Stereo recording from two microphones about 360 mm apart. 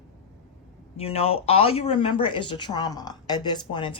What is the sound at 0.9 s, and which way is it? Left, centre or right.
Speech, centre.